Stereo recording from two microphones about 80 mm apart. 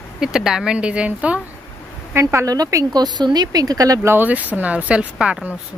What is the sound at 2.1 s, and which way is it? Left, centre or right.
Speech, right.